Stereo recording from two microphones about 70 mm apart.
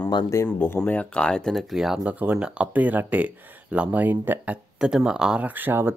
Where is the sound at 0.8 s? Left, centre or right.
Left; by 2.0 s centre.